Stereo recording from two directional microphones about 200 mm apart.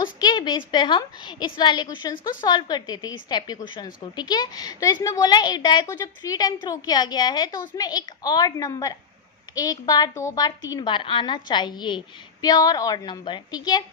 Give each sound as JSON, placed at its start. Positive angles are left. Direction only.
{"t": 0.0, "sound": "a woman's voice", "side_deg": 20}